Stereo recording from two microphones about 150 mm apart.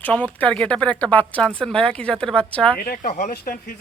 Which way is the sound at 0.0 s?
10° left (ahead or behind).